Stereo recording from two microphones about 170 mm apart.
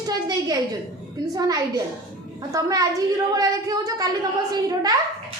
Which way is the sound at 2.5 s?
20° right (ahead or behind).